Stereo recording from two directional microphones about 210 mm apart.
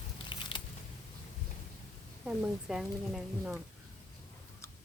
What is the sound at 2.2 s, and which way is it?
Speech, 5° right (ahead or behind).